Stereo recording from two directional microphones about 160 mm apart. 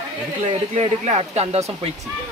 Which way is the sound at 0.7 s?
40° right (ahead or behind).